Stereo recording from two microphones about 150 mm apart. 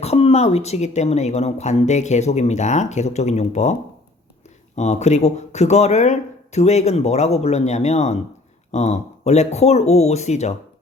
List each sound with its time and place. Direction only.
0.0 s speech: 45° left (ahead or behind)